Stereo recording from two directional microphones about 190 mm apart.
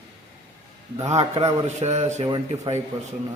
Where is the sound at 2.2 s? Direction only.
25° right (ahead or behind).